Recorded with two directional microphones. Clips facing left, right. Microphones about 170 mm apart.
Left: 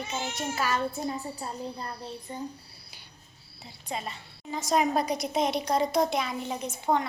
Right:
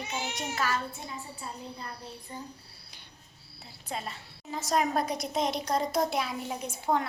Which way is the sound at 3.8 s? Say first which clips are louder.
Left 2 dB; centre (ahead or behind).